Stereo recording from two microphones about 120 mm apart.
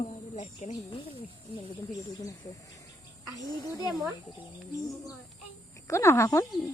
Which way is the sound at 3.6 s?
30° left (ahead or behind).